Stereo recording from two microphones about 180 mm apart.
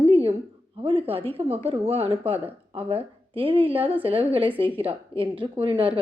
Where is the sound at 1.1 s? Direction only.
30° right (ahead or behind).